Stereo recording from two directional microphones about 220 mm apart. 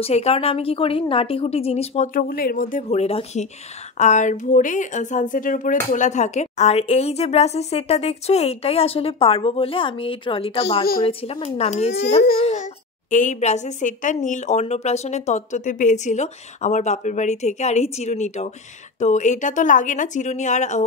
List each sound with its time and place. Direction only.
0.0 s a woman's voice: 25° left (ahead or behind)